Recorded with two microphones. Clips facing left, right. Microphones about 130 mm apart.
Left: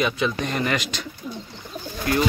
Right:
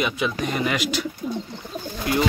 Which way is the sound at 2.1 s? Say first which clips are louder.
Even; 20° right (ahead or behind).